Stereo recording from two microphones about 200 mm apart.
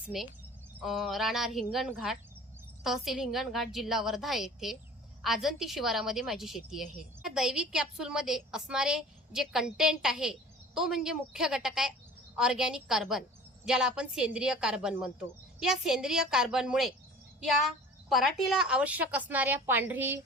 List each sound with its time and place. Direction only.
0.9 s a woman's voice: centre (ahead or behind)